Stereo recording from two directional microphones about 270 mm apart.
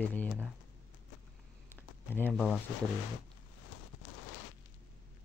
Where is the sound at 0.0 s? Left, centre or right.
Centre.